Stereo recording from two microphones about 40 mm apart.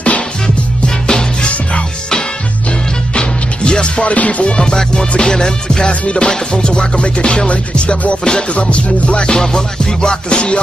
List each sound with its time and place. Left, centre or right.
0.8 s music: centre
3.2 s music: left
4.6 s music: centre
8.5 s music: left